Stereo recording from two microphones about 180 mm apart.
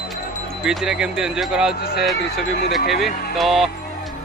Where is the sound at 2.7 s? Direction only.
Centre (ahead or behind).